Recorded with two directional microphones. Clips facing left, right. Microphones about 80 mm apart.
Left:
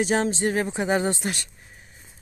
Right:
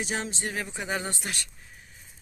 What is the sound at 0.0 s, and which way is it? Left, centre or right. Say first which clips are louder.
Speech: left 10 dB; left.